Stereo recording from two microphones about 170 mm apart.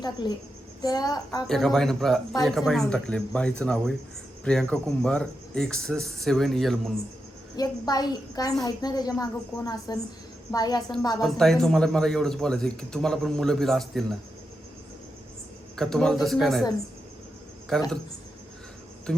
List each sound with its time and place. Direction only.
0.0 s a woman's voice: 25° left (ahead or behind)
1.5 s a man's voice: centre (ahead or behind)
7.5 s a woman's voice: 20° left (ahead or behind)
11.2 s a man's voice: centre (ahead or behind)
15.7 s a man's voice: 5° left (ahead or behind)
17.7 s a man's voice: centre (ahead or behind)